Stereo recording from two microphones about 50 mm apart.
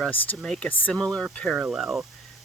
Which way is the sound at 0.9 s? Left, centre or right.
Centre.